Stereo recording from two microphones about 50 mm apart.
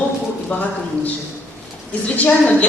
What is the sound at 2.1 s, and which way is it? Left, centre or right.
Speech, left.